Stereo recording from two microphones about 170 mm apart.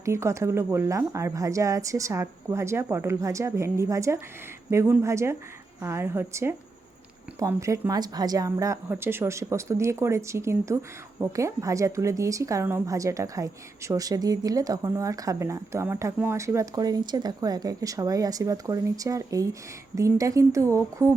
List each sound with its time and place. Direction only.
0.0 s a woman's voice: 15° right (ahead or behind)